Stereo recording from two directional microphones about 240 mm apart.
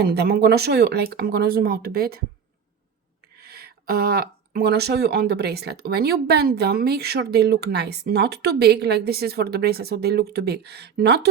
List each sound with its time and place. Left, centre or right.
0.1 s speech: right
3.4 s speech: right